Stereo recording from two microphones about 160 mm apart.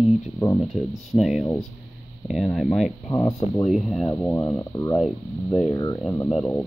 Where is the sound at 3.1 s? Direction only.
20° left (ahead or behind).